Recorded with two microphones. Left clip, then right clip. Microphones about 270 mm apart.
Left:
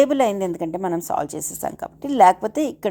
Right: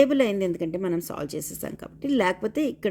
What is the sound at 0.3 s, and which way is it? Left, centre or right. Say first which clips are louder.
Speech: left 3 dB; centre.